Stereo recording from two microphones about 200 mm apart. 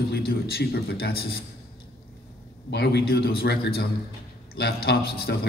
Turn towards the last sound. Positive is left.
turn(degrees=50)  # may be behind; listen again after turning